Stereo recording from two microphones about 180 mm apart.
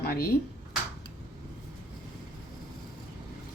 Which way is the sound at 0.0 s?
55° left (ahead or behind).